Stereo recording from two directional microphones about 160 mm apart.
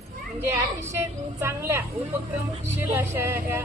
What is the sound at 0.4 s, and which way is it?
A woman's voice, 15° right (ahead or behind).